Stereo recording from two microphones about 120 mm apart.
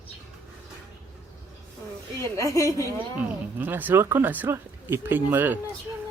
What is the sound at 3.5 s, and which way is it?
Speech, 15° right (ahead or behind).